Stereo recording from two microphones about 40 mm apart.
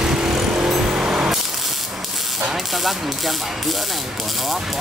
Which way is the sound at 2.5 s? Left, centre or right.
Centre.